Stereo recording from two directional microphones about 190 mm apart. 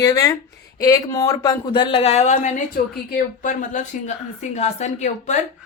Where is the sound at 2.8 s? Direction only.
50° left (ahead or behind).